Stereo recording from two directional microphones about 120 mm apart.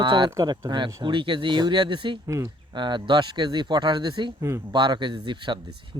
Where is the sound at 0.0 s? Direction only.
40° right (ahead or behind).